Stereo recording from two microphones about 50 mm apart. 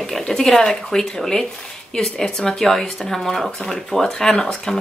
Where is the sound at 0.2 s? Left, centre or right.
Centre.